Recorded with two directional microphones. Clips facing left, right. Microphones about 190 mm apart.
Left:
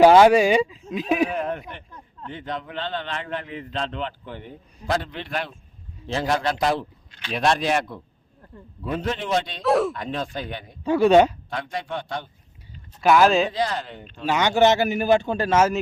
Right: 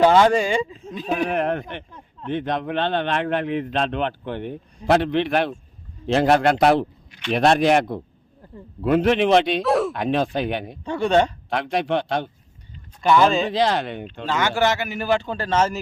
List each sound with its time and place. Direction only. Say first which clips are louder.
0.0 s a man's voice: left 3 dB; 10° left (ahead or behind)
1.3 s a man's voice: right 5 dB; 65° right (ahead or behind)
8.8 s a man's voice: right 10 dB; 70° right (ahead or behind)
9.6 s speech: even; centre (ahead or behind)
9.9 s a man's voice: right 7 dB; 75° right (ahead or behind)
10.8 s a man's voice: left 4 dB; 5° left (ahead or behind)
11.4 s a man's voice: right 7 dB; 75° right (ahead or behind)
13.0 s speech: even; 5° left (ahead or behind)
13.5 s a man's voice: right 5 dB; 80° right
14.3 s a man's voice: left 3 dB; 20° left (ahead or behind)